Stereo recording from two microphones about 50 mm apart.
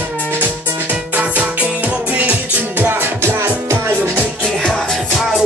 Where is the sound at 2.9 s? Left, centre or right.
Right.